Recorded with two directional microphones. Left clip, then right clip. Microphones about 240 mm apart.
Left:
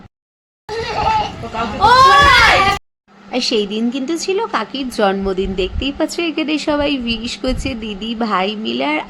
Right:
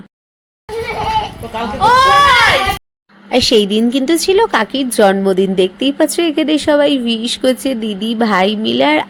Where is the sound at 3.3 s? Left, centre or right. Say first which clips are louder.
Right 6 dB; centre.